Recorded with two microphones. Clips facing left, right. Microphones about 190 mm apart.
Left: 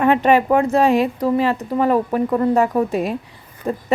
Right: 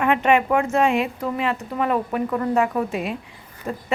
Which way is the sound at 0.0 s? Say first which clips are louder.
Left 4 dB; 35° left (ahead or behind).